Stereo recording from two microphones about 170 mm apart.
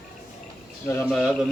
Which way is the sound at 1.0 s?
Centre (ahead or behind).